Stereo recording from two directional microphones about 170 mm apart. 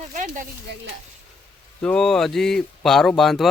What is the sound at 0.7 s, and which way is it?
Stir, 85° right.